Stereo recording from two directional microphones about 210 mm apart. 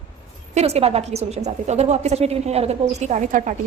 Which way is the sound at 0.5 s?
30° right (ahead or behind).